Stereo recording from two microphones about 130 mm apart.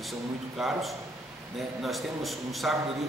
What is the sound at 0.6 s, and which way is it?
A man's voice, centre (ahead or behind).